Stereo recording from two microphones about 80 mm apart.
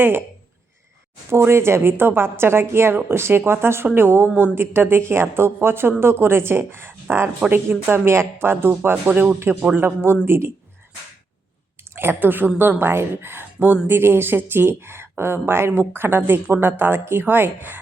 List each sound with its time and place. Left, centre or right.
0.0 s a woman's voice: right
1.3 s a woman's voice: right; by 9.8 s centre
9.8 s a woman's voice: right
11.9 s a woman's voice: right